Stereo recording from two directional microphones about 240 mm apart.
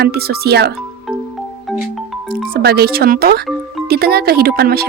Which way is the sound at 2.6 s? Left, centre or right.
Right.